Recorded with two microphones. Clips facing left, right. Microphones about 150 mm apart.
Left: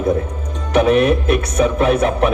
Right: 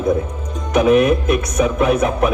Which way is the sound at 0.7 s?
30° left (ahead or behind).